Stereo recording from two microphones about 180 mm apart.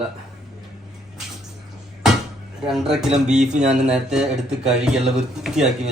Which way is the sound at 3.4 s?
40° right (ahead or behind).